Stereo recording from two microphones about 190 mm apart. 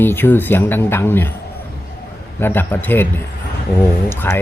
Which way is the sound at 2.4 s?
10° left (ahead or behind).